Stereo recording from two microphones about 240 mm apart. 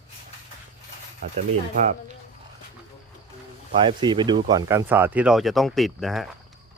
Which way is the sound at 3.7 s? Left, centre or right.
Centre.